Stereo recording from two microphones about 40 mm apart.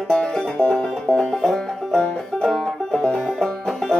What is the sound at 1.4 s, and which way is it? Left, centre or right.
Music, centre.